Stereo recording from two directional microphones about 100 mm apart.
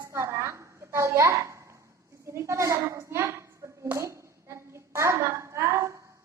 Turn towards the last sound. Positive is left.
turn(degrees=-30)  # may be behind; listen again after turning